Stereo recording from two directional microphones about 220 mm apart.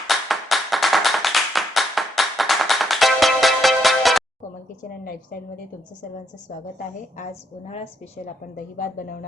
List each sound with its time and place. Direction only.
0.1 s clapping: centre (ahead or behind)
4.8 s a woman's voice: 40° left (ahead or behind)
6.7 s a woman's voice: 35° left (ahead or behind)